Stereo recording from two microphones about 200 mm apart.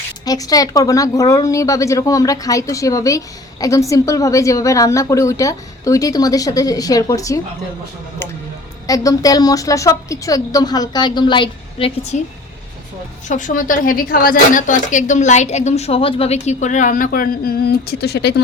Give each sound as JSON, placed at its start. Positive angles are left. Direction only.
{"t": 0.3, "sound": "a woman's voice", "side_deg": 20}
{"t": 8.9, "sound": "a woman's voice", "side_deg": 20}
{"t": 12.1, "sound": "a woman's voice", "side_deg": 40}